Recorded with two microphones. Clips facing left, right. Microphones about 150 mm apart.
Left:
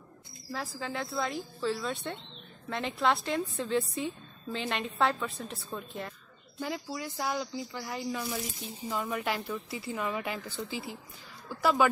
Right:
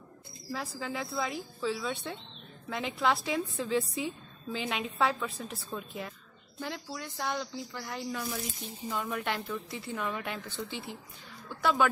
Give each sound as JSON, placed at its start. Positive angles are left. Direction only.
{"t": 0.5, "sound": "speech", "side_deg": 0}